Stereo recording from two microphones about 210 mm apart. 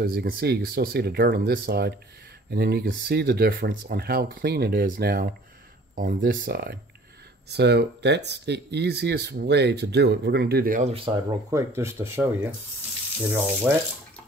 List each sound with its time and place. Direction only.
0.0 s speech: 45° right (ahead or behind)
10.9 s speech: 25° right (ahead or behind)
11.5 s speech: 10° right (ahead or behind)
13.7 s speech: centre (ahead or behind)